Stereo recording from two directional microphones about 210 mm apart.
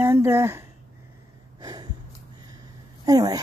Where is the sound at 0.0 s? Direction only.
10° right (ahead or behind).